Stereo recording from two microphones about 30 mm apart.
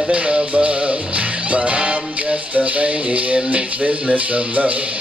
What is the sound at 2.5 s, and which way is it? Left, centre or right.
Music, right.